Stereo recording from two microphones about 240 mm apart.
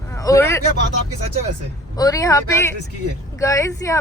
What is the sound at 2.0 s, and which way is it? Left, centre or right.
Speech, centre.